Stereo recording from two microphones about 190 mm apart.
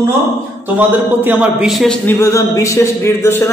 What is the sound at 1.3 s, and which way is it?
Speech, 10° right (ahead or behind).